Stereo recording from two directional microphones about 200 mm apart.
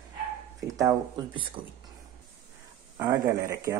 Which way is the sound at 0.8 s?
20° right (ahead or behind).